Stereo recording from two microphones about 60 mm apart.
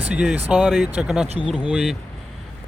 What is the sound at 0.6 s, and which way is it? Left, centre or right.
Speech, centre.